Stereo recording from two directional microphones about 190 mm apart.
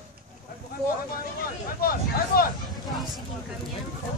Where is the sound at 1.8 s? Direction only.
50° left (ahead or behind).